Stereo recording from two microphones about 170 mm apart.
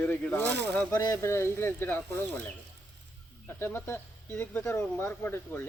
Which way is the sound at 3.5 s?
15° left (ahead or behind).